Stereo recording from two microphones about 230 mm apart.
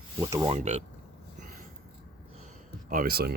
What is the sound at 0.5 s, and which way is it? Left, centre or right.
Speech, right.